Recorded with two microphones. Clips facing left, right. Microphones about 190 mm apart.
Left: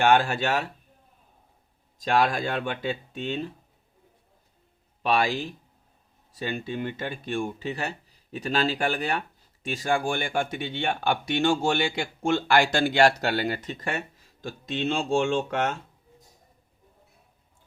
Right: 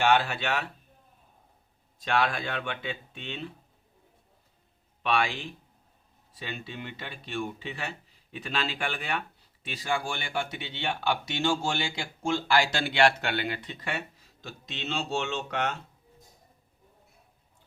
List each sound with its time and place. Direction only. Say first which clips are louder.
0.0 s speech: left 4 dB; 45° left (ahead or behind)
2.0 s speech: left 4 dB; 40° left (ahead or behind)
5.0 s speech: left 4 dB; 40° left (ahead or behind)